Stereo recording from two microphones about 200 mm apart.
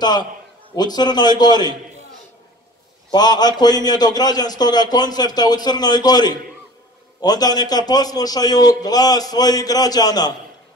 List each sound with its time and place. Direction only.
0.0 s a man's voice: 20° left (ahead or behind)
3.1 s a man's voice: 20° left (ahead or behind)